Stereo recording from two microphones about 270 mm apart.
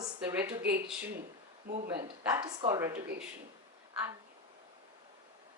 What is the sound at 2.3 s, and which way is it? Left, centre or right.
Speech, centre.